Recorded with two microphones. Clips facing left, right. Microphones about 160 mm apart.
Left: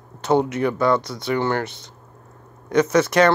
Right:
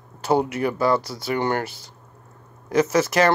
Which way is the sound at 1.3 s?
15° right (ahead or behind).